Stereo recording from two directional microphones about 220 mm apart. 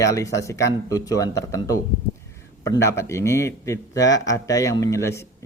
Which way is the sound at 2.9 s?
10° left (ahead or behind).